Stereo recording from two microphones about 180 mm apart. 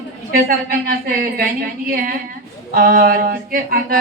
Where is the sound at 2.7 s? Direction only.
55° right (ahead or behind).